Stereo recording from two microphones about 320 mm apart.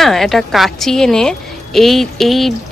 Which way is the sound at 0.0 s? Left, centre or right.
Centre.